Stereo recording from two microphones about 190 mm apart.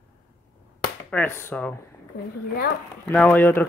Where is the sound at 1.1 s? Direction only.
10° left (ahead or behind).